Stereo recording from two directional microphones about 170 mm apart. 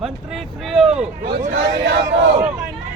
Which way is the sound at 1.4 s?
50° right (ahead or behind).